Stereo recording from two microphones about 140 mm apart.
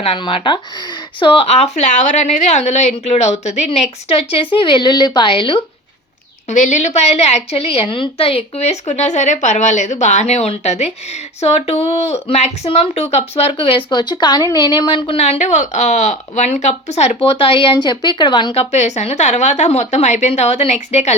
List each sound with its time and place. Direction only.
0.0 s a woman's voice: 40° left (ahead or behind)
6.5 s speech: 60° left (ahead or behind); by 15.2 s 40° left (ahead or behind)
15.2 s speech: 55° left (ahead or behind)